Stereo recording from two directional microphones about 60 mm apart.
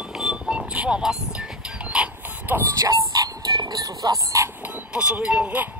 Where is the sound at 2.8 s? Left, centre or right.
Right.